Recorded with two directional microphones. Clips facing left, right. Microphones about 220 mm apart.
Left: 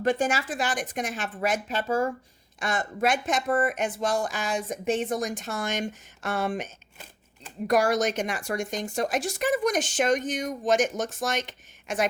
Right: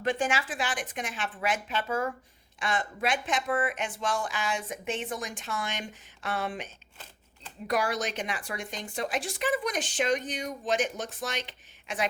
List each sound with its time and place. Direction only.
0.0 s a woman's voice: 40° left (ahead or behind)
2.6 s speech: 45° left (ahead or behind)
7.7 s speech: 45° left (ahead or behind)